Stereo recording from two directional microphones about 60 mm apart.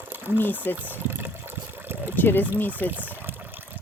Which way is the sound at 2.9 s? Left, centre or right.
Right.